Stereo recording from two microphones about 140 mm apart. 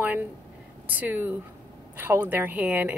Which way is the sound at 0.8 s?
15° right (ahead or behind).